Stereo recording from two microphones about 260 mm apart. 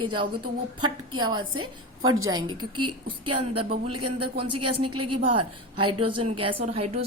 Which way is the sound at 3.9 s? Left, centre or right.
Right.